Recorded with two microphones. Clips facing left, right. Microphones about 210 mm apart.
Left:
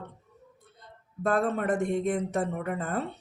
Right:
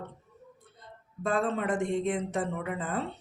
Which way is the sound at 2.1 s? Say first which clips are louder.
Left 2 dB; 40° left (ahead or behind).